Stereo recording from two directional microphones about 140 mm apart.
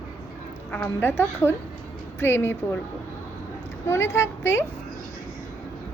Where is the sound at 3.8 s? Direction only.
20° left (ahead or behind).